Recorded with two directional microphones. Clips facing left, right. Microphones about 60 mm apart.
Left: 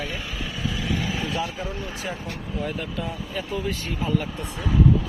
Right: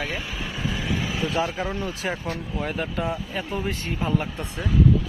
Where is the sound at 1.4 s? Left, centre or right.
Right.